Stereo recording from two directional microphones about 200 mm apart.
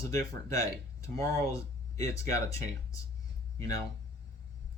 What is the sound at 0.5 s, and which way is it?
Speech, 15° left (ahead or behind).